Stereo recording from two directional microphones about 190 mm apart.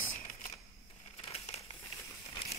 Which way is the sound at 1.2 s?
30° left (ahead or behind).